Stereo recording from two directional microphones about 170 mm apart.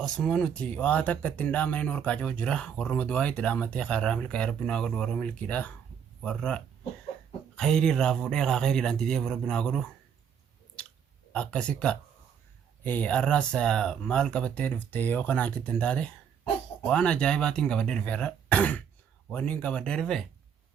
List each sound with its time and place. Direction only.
0.0 s speech: 5° left (ahead or behind)
10.8 s chewing: 5° left (ahead or behind)
11.3 s speech: 5° left (ahead or behind)